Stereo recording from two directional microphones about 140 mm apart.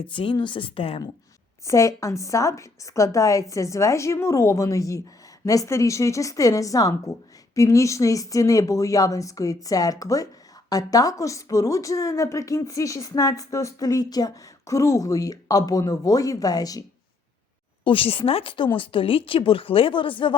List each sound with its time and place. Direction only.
0.0 s speech: 35° left (ahead or behind)
1.6 s speech: 20° left (ahead or behind)
17.8 s speech: 40° left (ahead or behind)